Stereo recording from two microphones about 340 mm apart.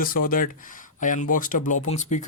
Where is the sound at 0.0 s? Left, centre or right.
Left.